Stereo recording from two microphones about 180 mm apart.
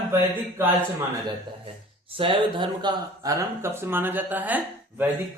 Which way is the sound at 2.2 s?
30° right (ahead or behind).